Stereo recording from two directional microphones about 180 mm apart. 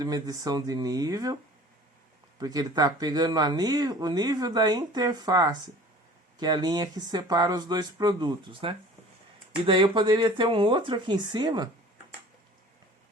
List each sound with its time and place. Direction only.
0.0 s speech: 20° right (ahead or behind)
2.4 s speech: 20° right (ahead or behind)